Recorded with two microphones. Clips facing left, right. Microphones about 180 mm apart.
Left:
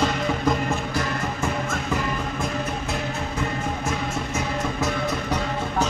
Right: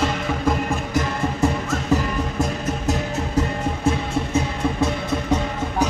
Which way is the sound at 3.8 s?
30° right (ahead or behind).